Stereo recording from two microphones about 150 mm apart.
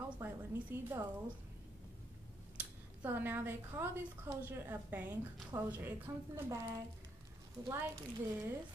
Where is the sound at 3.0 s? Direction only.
15° right (ahead or behind).